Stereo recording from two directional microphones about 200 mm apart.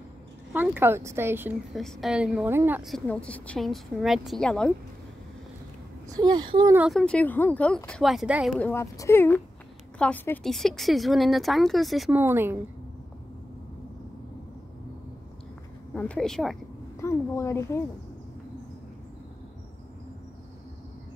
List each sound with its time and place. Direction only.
0.5 s speech: 10° right (ahead or behind)
1.8 s a woman's voice: centre (ahead or behind)
6.0 s speech: 20° right (ahead or behind)
6.8 s a woman's voice: centre (ahead or behind)
8.5 s a woman's voice: 10° left (ahead or behind); by 12.5 s 10° right (ahead or behind)
15.9 s a woman's voice: 5° left (ahead or behind)
17.0 s speech: 15° left (ahead or behind)